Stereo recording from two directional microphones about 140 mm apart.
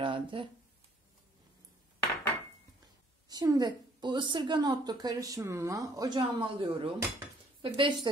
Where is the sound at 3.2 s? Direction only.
30° right (ahead or behind).